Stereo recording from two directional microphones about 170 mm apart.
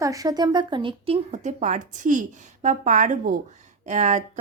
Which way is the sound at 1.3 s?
45° right (ahead or behind).